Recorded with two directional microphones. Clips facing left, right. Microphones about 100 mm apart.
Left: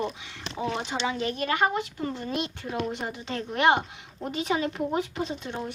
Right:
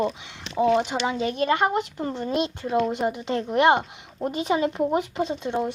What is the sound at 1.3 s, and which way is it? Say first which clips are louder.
Speech: right 4 dB; 25° right (ahead or behind).